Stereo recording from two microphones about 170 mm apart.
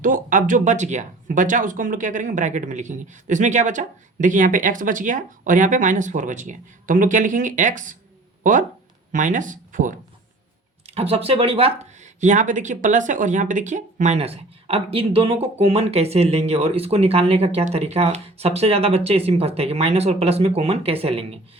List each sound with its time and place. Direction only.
0.0 s speech: 50° right (ahead or behind)
9.1 s speech: 50° right (ahead or behind)
10.8 s speech: 35° right (ahead or behind)